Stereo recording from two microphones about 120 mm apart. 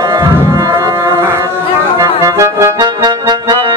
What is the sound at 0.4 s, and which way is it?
Music, 25° right (ahead or behind).